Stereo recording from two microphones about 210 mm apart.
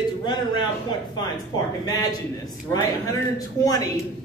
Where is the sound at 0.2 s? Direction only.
20° left (ahead or behind).